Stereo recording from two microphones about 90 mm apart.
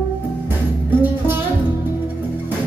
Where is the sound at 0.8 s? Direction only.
20° right (ahead or behind).